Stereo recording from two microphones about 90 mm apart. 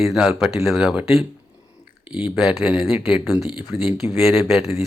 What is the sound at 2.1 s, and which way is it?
Speech, 15° right (ahead or behind).